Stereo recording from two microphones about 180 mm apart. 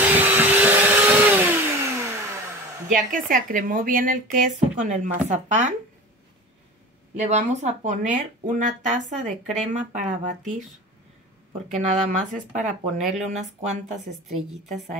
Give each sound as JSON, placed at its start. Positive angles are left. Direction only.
{"t": 0.0, "sound": "vacuum cleaner", "side_deg": -10}
{"t": 2.9, "sound": "speech", "side_deg": -50}
{"t": 7.2, "sound": "speech", "side_deg": -40}
{"t": 11.7, "sound": "speech", "side_deg": -40}
{"t": 13.9, "sound": "a woman's voice", "side_deg": 0}